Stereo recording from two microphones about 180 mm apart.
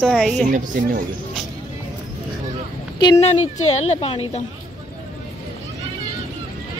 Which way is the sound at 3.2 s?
35° left (ahead or behind).